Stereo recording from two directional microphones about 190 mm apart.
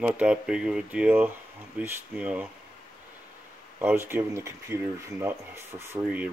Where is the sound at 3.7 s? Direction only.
10° right (ahead or behind).